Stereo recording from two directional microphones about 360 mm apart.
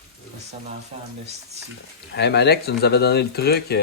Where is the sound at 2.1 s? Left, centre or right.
Left.